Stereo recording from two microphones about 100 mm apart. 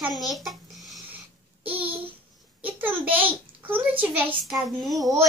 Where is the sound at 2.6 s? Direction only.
20° right (ahead or behind).